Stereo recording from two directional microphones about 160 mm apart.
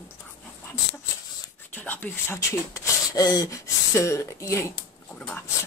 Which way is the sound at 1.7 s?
10° left (ahead or behind).